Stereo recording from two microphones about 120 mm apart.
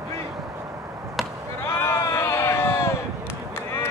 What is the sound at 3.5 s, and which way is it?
Honk, 20° left (ahead or behind).